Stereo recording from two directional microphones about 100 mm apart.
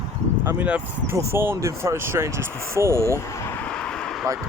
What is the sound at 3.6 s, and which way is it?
Vehicle, 10° left (ahead or behind).